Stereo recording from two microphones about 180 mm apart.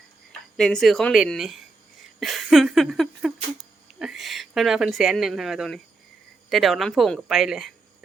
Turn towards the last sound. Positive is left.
turn(degrees=0)  # may be behind; listen again after turning